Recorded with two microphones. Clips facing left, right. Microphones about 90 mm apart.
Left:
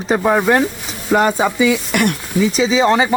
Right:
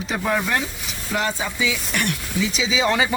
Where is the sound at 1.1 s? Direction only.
60° left (ahead or behind).